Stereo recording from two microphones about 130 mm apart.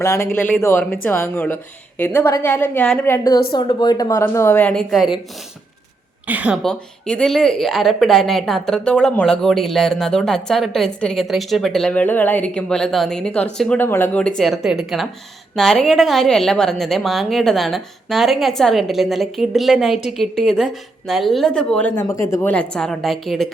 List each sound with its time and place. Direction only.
0.0 s a woman's voice: 20° left (ahead or behind)
3.1 s a woman's voice: 30° left (ahead or behind)
4.7 s speech: centre (ahead or behind)
6.2 s a woman's voice: 10° right (ahead or behind)
6.6 s speech: 5° left (ahead or behind)
22.0 s a woman's voice: 25° left (ahead or behind)
22.4 s speech: 10° left (ahead or behind)